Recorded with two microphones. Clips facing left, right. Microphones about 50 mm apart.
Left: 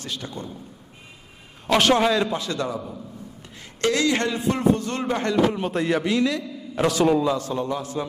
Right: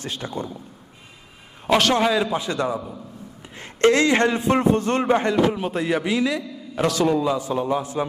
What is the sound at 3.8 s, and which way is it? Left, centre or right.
A man's voice, right.